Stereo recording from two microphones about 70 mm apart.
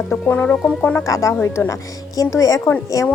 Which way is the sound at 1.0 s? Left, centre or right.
Left.